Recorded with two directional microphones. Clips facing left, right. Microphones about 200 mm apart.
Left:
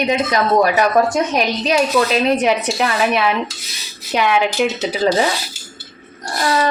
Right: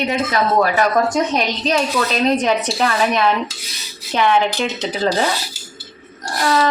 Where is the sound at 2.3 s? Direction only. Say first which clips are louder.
Left 1 dB; 10° left (ahead or behind).